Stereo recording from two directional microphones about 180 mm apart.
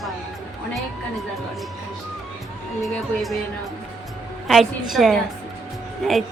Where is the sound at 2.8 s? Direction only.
Centre (ahead or behind).